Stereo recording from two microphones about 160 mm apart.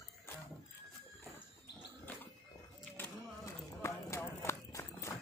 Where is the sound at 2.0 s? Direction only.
10° left (ahead or behind).